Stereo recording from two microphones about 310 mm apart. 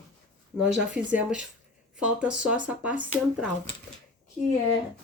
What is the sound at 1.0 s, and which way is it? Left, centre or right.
Speech, centre.